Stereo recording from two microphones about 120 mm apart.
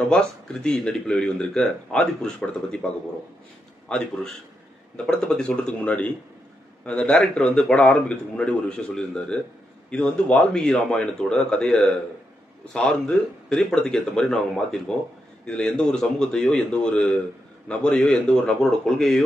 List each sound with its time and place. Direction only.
0.1 s speech: 5° left (ahead or behind)
3.9 s a man's voice: 5° left (ahead or behind)